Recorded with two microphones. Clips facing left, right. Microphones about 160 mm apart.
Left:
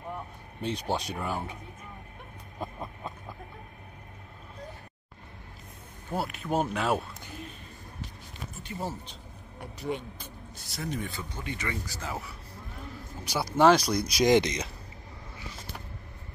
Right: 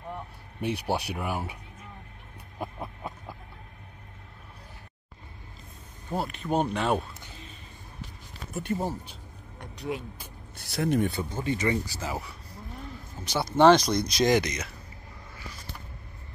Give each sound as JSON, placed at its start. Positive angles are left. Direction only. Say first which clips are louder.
{"t": 0.6, "sound": "speech", "louder": "right 2 dB", "side_deg": -10}
{"t": 2.6, "sound": "a sound", "louder": "right 1 dB", "side_deg": -10}
{"t": 6.1, "sound": "speech", "louder": "right 2 dB", "side_deg": 5}
{"t": 8.7, "sound": "speech", "louder": "right 2 dB", "side_deg": -15}
{"t": 9.6, "sound": "speech", "louder": "even", "side_deg": 0}
{"t": 10.5, "sound": "speech", "louder": "right 9 dB", "side_deg": -60}
{"t": 11.4, "sound": "speech", "louder": "right 9 dB", "side_deg": -25}
{"t": 12.0, "sound": "speech", "louder": "right 3 dB", "side_deg": 0}
{"t": 13.2, "sound": "speech", "louder": "right 2 dB", "side_deg": 10}
{"t": 14.3, "sound": "speech", "louder": "left 2 dB", "side_deg": 25}